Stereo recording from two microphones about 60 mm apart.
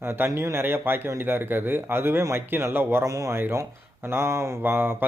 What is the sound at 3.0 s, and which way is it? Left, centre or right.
Speech, right.